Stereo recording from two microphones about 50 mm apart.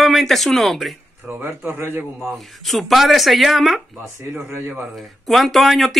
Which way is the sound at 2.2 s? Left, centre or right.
Centre.